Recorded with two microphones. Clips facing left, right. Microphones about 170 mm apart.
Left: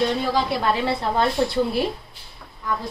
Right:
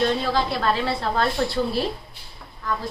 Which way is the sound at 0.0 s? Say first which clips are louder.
Even; 15° left (ahead or behind).